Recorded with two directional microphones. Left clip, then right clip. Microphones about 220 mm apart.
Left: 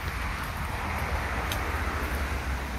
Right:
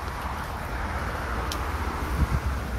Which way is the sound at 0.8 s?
45° right (ahead or behind).